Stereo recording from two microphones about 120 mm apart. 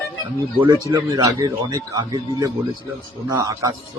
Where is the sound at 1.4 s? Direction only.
45° right (ahead or behind).